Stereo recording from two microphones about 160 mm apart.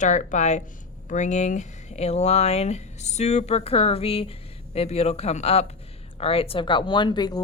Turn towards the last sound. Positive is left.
turn(degrees=25)  # may be behind; listen again after turning